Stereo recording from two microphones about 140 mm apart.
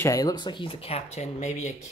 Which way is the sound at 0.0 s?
25° left (ahead or behind).